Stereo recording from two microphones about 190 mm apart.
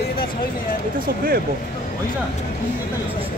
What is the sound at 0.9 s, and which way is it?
Speech, 50° right (ahead or behind).